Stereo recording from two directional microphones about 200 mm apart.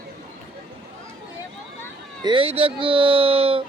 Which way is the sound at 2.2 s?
25° right (ahead or behind).